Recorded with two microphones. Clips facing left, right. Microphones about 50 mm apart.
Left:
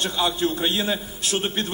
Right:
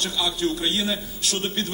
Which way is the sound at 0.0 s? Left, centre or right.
Left.